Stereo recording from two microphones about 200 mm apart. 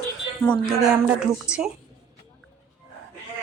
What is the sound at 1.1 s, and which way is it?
Speech, 5° right (ahead or behind).